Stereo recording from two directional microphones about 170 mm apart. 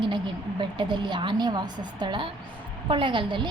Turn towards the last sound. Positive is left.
turn(degrees=-30)  # may be behind; listen again after turning